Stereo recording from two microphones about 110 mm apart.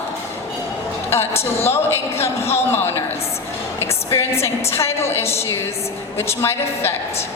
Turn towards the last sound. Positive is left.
turn(degrees=20)  # may be behind; listen again after turning